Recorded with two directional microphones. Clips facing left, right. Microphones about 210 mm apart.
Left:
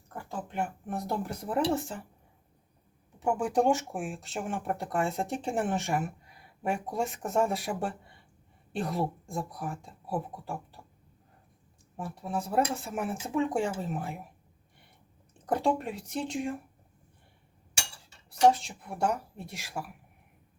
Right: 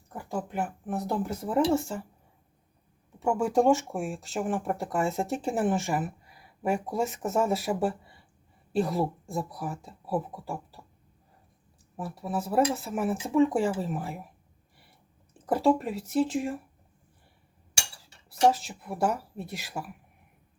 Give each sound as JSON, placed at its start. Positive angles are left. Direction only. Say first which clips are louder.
{"t": 0.5, "sound": "speech", "louder": "left 2 dB", "side_deg": -5}
{"t": 3.2, "sound": "speech", "louder": "right 3 dB", "side_deg": 0}
{"t": 11.9, "sound": "speech", "louder": "right 2 dB", "side_deg": 0}
{"t": 15.4, "sound": "speech", "louder": "right 4 dB", "side_deg": 0}
{"t": 18.5, "sound": "speech", "louder": "right 3 dB", "side_deg": 0}